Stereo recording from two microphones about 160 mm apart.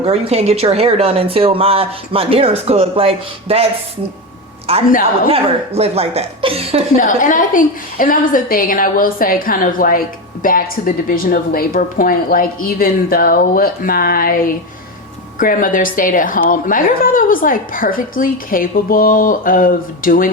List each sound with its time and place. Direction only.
0.0 s speech: 40° right (ahead or behind)
4.7 s speech: 35° right (ahead or behind)
6.9 s a woman's voice: 55° left (ahead or behind)